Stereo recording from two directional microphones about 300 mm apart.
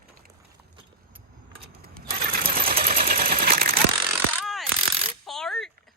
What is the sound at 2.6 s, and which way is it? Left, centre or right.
Sewing machine, right.